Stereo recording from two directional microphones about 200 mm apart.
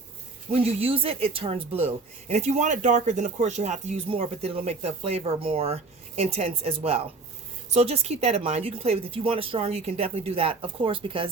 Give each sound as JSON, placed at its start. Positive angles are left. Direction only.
{"t": 0.5, "sound": "speech", "side_deg": -30}